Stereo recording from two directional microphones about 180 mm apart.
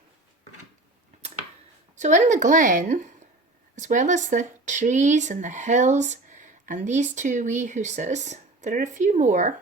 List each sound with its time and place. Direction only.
2.0 s speech: 45° right (ahead or behind)